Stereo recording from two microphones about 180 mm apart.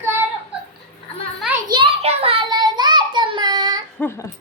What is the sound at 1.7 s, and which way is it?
Child singing, 30° right (ahead or behind).